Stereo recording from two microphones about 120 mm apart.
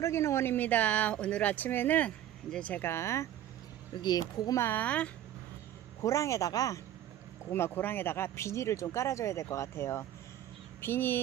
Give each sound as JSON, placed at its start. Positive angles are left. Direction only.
{"t": 0.0, "sound": "speech", "side_deg": 25}
{"t": 3.9, "sound": "speech", "side_deg": 35}
{"t": 4.6, "sound": "speech", "side_deg": 15}
{"t": 6.0, "sound": "speech", "side_deg": 25}
{"t": 7.5, "sound": "speech", "side_deg": 20}